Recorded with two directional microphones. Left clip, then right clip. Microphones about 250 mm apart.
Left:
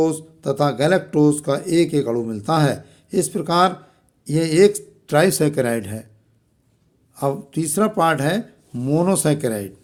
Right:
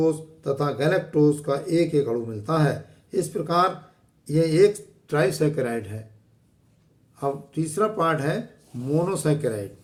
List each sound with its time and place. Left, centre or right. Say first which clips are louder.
0.0 s speech: left 3 dB; left
7.2 s speech: left 5 dB; left